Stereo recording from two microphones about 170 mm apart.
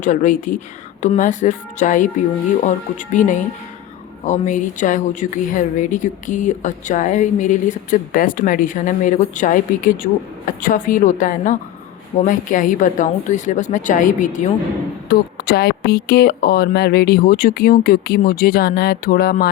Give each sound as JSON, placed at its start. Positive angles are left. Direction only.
{"t": 0.0, "sound": "speech", "side_deg": 50}
{"t": 15.1, "sound": "speech", "side_deg": 65}